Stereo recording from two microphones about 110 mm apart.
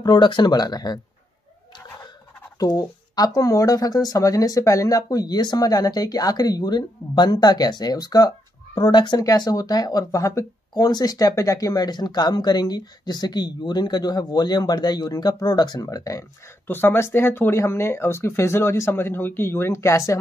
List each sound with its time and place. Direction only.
0.0 s speech: 45° left (ahead or behind)
2.6 s speech: 35° left (ahead or behind)
16.6 s speech: 20° left (ahead or behind)